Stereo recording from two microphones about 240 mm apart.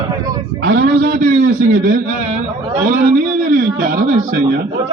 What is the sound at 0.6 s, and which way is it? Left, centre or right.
A man's voice, right.